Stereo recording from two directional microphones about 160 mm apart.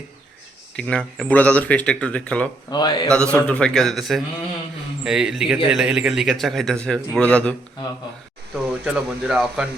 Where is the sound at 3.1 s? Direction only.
5° left (ahead or behind).